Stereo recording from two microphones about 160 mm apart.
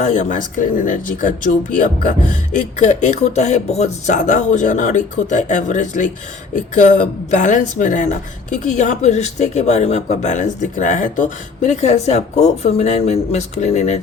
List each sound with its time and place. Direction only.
0.0 s a woman's voice: 50° left (ahead or behind)